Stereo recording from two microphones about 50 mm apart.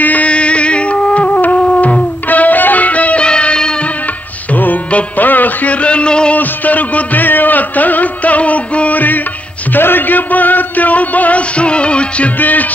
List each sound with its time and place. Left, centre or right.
0.0 s music: left
0.3 s music: left
4.6 s music: left; by 6.3 s centre
6.3 s music: left
12.4 s music: left